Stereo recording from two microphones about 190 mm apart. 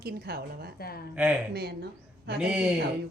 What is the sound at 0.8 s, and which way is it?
Speech, 55° left (ahead or behind).